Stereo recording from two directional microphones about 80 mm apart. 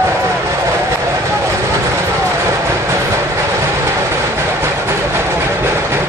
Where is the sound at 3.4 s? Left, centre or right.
Right.